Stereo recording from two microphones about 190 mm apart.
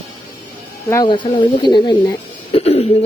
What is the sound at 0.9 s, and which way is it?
Speech, 20° left (ahead or behind).